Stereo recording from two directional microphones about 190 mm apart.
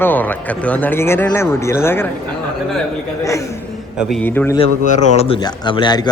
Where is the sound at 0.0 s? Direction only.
10° left (ahead or behind).